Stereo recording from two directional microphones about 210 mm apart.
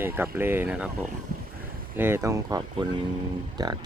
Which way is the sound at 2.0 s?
10° right (ahead or behind).